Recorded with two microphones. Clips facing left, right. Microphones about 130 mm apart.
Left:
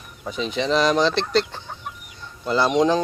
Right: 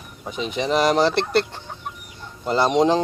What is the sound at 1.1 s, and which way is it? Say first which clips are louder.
Speech: right 1 dB; 60° right (ahead or behind).